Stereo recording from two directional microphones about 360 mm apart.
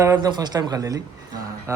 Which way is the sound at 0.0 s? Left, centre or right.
Centre.